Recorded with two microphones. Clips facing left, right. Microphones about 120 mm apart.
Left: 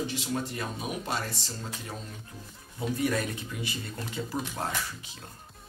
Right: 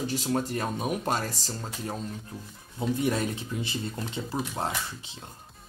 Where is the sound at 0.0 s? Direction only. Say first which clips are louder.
Right 3 dB; 40° right (ahead or behind).